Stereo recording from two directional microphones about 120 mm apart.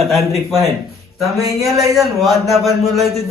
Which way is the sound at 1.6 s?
30° right (ahead or behind).